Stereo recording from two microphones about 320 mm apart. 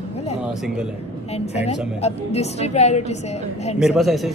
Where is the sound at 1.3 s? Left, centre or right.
Centre.